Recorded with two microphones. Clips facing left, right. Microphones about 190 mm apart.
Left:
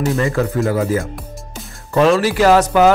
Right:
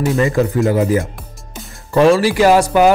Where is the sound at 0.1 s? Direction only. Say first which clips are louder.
Right 3 dB; 20° right (ahead or behind).